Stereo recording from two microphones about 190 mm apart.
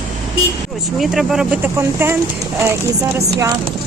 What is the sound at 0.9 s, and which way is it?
Speech, centre (ahead or behind).